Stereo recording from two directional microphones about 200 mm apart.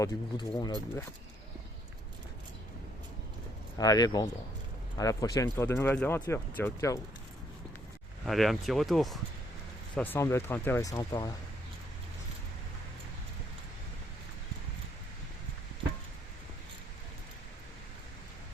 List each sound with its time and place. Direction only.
0.0 s speech: 20° left (ahead or behind)
3.8 s speech: 20° left (ahead or behind)
8.2 s speech: centre (ahead or behind); by 11.3 s 20° left (ahead or behind)